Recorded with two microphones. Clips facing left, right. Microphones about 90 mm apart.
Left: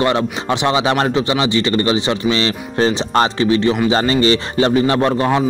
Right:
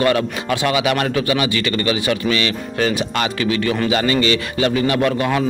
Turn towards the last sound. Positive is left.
turn(degrees=30)  # may be behind; listen again after turning